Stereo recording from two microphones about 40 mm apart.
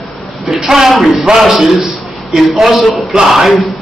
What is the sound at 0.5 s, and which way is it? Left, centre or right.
A woman's voice, centre.